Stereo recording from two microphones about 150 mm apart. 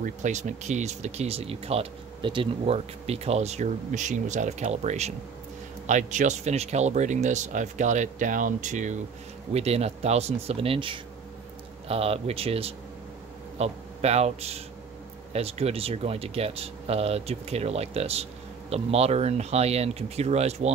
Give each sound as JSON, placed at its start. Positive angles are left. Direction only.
{"t": 0.0, "sound": "a man's voice", "side_deg": -50}